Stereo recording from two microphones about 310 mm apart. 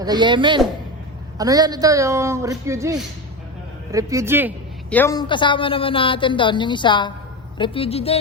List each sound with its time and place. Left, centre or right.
0.0 s speech: centre
4.9 s a woman's voice: centre